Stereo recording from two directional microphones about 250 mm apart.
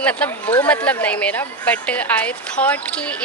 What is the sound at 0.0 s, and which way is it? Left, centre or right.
Speech, centre.